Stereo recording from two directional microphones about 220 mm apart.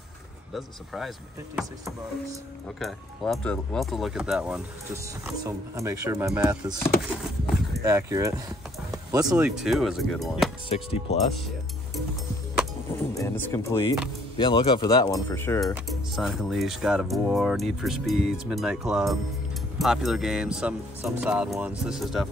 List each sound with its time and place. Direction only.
0.6 s speech: centre (ahead or behind)
2.8 s speech: centre (ahead or behind)
7.8 s speech: 15° right (ahead or behind)
9.6 s speech: centre (ahead or behind)
10.7 s speech: 25° left (ahead or behind)
13.1 s speech: 15° left (ahead or behind)
15.7 s speech: centre (ahead or behind)